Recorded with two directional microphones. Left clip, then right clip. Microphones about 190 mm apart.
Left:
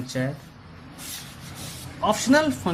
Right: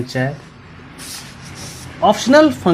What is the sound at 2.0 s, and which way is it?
Speech, 45° right (ahead or behind).